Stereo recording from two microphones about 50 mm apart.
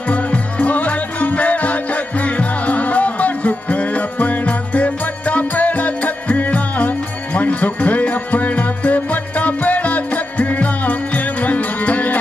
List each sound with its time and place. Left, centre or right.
0.1 s music: left